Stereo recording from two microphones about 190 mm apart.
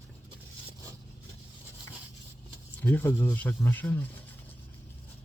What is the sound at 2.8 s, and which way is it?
Speech, 10° left (ahead or behind).